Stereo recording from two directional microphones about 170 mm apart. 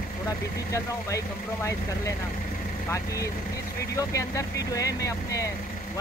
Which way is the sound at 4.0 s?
20° left (ahead or behind).